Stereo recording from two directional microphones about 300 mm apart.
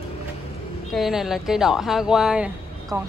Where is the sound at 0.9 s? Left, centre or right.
Centre.